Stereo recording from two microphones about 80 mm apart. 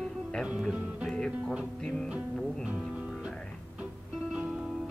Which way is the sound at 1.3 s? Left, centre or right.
Centre.